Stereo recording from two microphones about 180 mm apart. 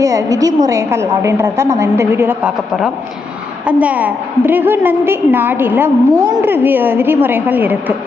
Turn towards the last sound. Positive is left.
turn(degrees=-10)  # may be behind; listen again after turning